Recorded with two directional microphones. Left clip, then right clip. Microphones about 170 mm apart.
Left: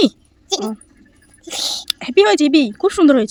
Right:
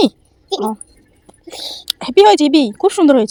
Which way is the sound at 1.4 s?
75° left (ahead or behind).